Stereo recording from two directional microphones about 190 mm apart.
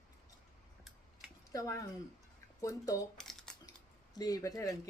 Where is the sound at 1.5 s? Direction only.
20° left (ahead or behind).